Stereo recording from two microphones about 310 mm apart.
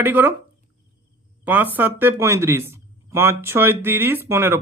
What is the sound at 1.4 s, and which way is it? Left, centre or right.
Speech, centre.